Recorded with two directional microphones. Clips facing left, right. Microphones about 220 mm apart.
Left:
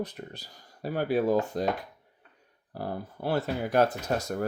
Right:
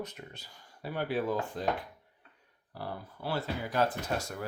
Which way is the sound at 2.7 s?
45° left (ahead or behind).